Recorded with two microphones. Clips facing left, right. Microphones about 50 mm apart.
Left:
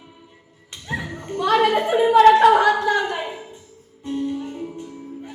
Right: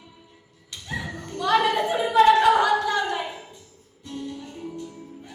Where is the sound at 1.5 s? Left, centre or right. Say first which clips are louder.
Left 4 dB; centre.